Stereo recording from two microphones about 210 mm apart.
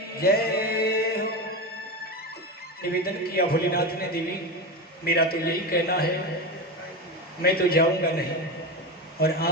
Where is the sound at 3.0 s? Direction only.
45° left (ahead or behind).